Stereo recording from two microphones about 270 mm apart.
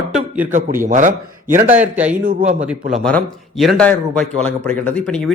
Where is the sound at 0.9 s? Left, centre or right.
Right.